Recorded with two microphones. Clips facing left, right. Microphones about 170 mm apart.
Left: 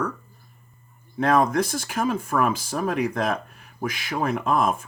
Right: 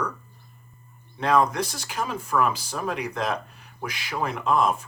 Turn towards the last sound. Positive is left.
turn(degrees=50)  # may be behind; listen again after turning